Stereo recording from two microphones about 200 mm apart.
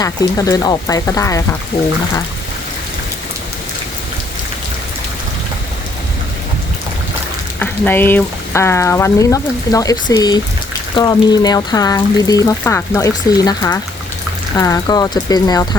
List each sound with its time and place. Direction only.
0.0 s speech: 15° left (ahead or behind)
7.6 s speech: 10° left (ahead or behind)